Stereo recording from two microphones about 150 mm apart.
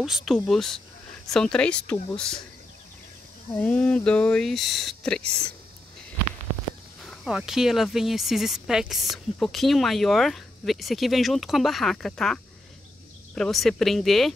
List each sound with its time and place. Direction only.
0.0 s speech: centre (ahead or behind)
3.5 s speech: 10° left (ahead or behind)
7.0 s speech: centre (ahead or behind)